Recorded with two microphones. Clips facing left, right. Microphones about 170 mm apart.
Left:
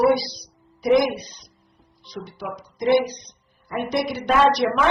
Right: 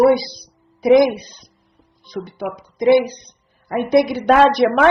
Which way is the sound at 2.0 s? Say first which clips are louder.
Right 7 dB; 55° right (ahead or behind).